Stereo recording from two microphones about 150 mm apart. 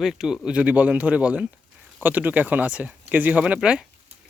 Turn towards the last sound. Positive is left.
turn(degrees=-5)  # may be behind; listen again after turning